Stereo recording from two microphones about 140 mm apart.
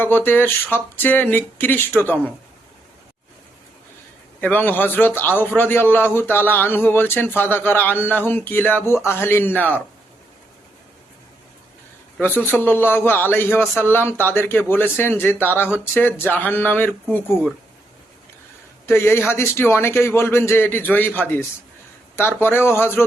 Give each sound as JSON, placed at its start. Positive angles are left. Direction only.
{"t": 0.0, "sound": "a man's voice", "side_deg": 15}
{"t": 4.4, "sound": "a man's voice", "side_deg": 15}
{"t": 12.5, "sound": "a man's voice", "side_deg": 15}
{"t": 18.9, "sound": "a man's voice", "side_deg": 20}